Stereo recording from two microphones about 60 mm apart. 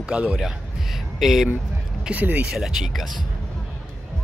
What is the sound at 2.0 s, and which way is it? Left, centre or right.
Speech, right.